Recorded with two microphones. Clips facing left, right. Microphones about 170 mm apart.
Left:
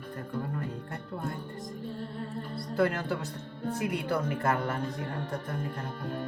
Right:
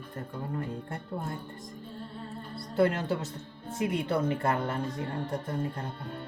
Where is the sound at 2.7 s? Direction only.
25° right (ahead or behind).